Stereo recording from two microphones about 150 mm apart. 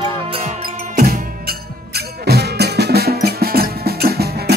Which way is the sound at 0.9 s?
70° right (ahead or behind).